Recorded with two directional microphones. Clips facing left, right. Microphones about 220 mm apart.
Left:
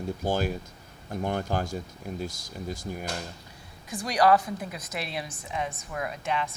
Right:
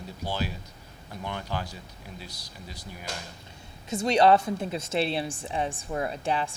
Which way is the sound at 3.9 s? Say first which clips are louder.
Right 2 dB; 25° right (ahead or behind).